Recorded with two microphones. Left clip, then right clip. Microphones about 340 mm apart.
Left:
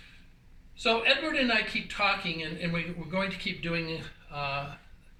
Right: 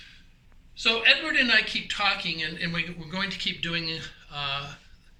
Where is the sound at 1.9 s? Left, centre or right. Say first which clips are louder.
Right 2 dB; centre.